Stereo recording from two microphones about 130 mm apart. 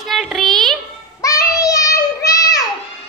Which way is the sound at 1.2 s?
25° left (ahead or behind).